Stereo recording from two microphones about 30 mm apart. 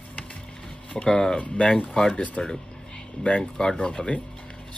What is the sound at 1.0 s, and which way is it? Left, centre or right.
Speech, left.